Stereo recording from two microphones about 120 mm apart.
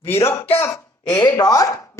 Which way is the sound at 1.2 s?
30° left (ahead or behind).